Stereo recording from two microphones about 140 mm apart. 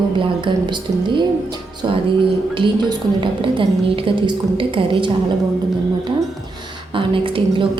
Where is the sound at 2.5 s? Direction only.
35° right (ahead or behind).